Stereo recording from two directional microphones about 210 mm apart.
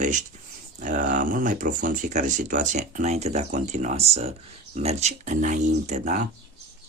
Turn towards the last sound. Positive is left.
turn(degrees=-35)  # may be behind; listen again after turning